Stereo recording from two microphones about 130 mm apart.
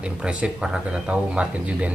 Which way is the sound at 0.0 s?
10° right (ahead or behind).